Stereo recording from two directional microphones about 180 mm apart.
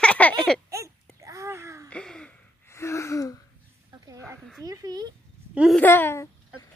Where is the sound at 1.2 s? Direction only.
15° right (ahead or behind).